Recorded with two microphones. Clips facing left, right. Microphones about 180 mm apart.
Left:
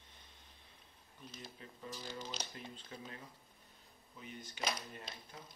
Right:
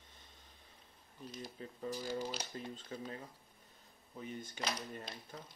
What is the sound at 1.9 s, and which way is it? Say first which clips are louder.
Speech: right 7 dB; 10° right (ahead or behind).